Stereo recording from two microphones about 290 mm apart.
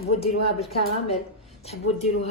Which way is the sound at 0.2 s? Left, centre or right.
Left.